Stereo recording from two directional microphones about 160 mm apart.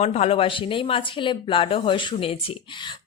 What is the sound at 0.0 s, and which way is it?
A woman's voice, 40° left (ahead or behind).